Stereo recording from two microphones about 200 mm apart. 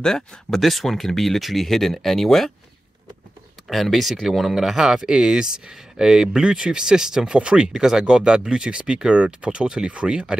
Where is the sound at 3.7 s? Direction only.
Centre (ahead or behind).